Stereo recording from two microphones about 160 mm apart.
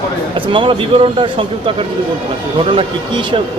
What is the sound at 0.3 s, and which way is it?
Speech, 30° right (ahead or behind).